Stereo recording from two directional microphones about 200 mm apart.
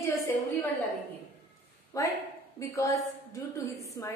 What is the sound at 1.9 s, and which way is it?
A woman's voice, 15° left (ahead or behind).